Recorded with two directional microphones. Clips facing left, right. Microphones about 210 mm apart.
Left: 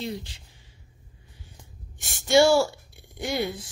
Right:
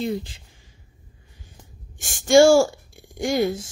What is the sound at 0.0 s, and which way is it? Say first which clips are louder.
Speech: right 7 dB; 55° right (ahead or behind).